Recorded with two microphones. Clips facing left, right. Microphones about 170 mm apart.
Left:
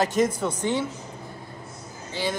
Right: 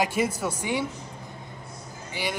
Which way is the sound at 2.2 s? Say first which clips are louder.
Left 3 dB; 15° right (ahead or behind).